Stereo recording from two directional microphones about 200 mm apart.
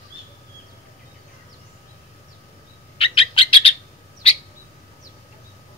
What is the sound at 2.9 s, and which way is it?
Bird, 25° left (ahead or behind).